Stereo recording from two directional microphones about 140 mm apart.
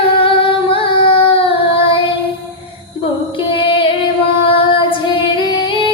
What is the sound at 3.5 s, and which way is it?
Female singing, 35° left (ahead or behind).